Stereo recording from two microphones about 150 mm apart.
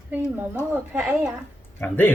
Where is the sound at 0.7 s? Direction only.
10° right (ahead or behind).